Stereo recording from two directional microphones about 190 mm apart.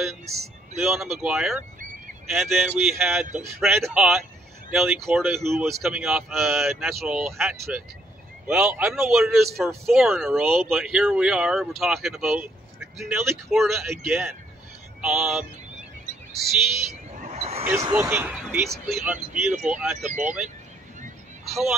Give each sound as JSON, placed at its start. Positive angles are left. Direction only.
{"t": 0.0, "sound": "speech", "side_deg": 0}
{"t": 17.3, "sound": "basketball bounce", "side_deg": -35}
{"t": 17.9, "sound": "speech", "side_deg": -10}
{"t": 21.5, "sound": "speech", "side_deg": 0}